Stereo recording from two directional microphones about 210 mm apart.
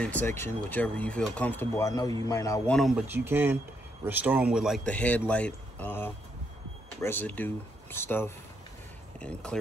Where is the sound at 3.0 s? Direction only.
10° right (ahead or behind).